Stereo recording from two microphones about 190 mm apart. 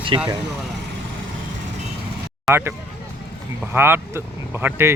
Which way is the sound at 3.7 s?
10° right (ahead or behind).